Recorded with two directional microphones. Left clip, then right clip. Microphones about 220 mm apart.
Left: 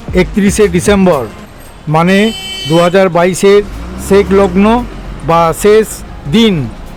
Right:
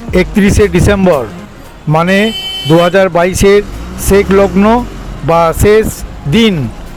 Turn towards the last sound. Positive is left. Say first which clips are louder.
# even
turn(degrees=-15)  # may be behind; listen again after turning